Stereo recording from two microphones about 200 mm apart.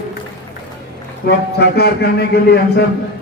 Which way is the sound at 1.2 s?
55° left (ahead or behind).